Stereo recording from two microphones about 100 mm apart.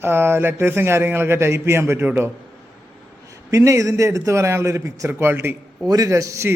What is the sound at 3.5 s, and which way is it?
Speech, 30° right (ahead or behind).